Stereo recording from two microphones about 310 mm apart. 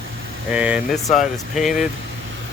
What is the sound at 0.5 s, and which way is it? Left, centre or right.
Speech, centre.